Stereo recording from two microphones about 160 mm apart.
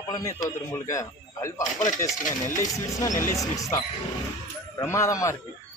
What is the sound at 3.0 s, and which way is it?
A man's voice, 20° left (ahead or behind).